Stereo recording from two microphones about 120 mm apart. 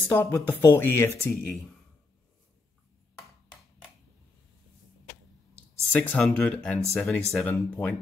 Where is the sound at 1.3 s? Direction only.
Centre (ahead or behind).